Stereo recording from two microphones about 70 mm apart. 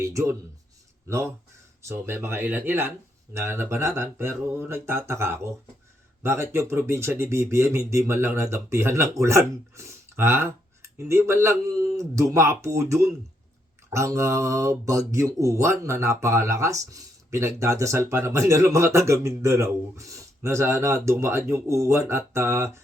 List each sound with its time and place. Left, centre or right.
0.0 s speech: right
3.3 s speech: right